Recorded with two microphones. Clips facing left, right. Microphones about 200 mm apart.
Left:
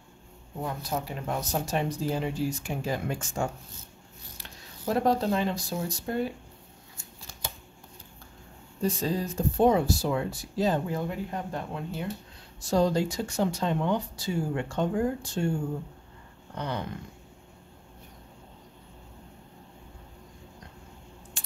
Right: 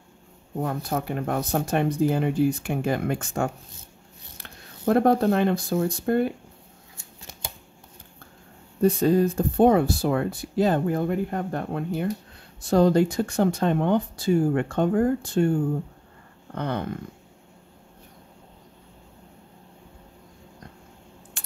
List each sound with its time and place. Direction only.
0.6 s speech: 55° right (ahead or behind)
8.8 s speech: 60° right (ahead or behind)
16.5 s speech: 55° right (ahead or behind)
21.4 s scissors: 60° right (ahead or behind)